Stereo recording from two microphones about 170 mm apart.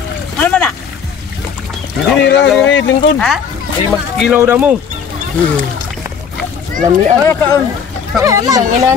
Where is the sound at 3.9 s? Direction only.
5° right (ahead or behind).